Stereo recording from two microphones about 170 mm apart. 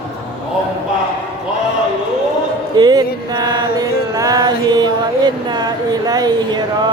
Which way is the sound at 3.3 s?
25° right (ahead or behind).